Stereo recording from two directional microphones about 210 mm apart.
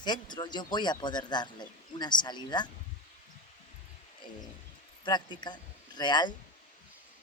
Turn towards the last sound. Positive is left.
turn(degrees=20)  # may be behind; listen again after turning